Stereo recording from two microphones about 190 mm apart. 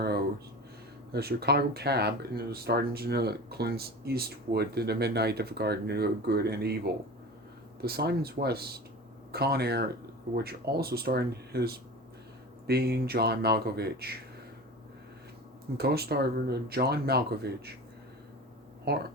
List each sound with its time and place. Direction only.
1.1 s speech: 55° right (ahead or behind)
15.8 s speech: 55° right (ahead or behind)
18.9 s speech: 55° right (ahead or behind)